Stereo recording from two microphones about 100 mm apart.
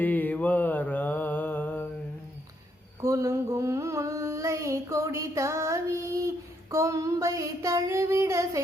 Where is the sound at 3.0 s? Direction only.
30° right (ahead or behind).